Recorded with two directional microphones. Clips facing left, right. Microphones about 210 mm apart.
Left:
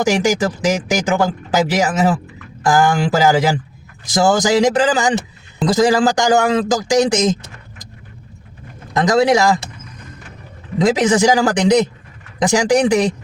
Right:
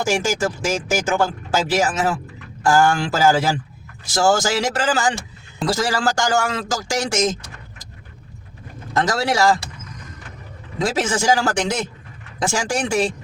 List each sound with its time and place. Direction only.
0.0 s a man's voice: 15° left (ahead or behind)
8.9 s a man's voice: 15° left (ahead or behind)
10.8 s a man's voice: 15° left (ahead or behind)